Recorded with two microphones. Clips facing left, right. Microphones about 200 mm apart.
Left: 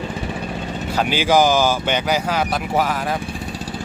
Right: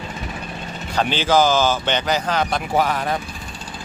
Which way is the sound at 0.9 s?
10° left (ahead or behind).